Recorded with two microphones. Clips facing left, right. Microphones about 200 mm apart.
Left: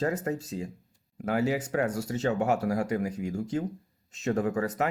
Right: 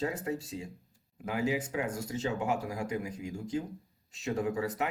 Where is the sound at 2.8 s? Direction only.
45° left (ahead or behind).